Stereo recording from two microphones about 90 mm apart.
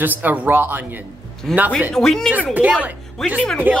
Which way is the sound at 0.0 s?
20° right (ahead or behind).